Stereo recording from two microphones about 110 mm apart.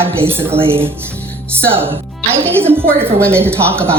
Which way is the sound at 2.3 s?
20° right (ahead or behind).